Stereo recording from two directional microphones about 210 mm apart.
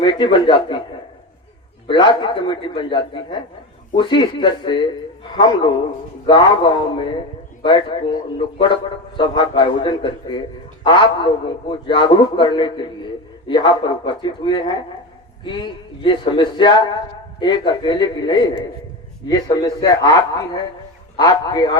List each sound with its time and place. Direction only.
0.0 s a man's voice: 20° left (ahead or behind)
1.9 s a man's voice: 25° left (ahead or behind)